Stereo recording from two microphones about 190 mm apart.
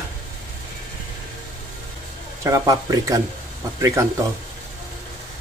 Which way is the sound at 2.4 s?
15° right (ahead or behind).